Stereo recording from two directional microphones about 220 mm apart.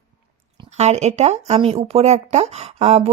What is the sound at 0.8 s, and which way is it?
Speech, 30° right (ahead or behind).